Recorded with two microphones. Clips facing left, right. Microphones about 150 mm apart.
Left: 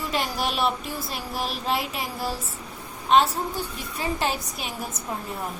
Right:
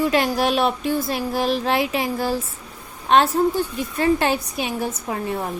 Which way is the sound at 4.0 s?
65° right (ahead or behind).